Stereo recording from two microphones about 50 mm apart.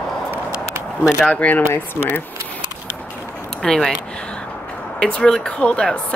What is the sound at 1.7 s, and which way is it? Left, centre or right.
Speech, left.